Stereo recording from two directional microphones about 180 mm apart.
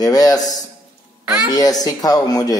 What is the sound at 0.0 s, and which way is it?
Speech, 20° left (ahead or behind).